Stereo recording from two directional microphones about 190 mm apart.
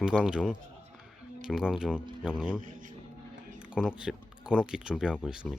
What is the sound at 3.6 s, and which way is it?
Speech, 5° right (ahead or behind).